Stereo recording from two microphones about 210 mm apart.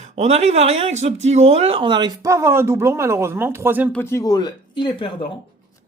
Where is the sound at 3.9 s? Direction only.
10° left (ahead or behind).